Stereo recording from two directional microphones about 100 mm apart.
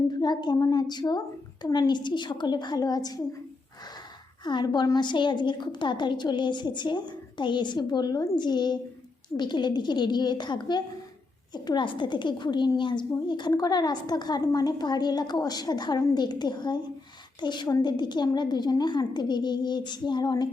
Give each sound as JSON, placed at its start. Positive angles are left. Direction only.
{"t": 0.1, "sound": "a woman's voice", "side_deg": 45}
{"t": 4.4, "sound": "a woman's voice", "side_deg": 50}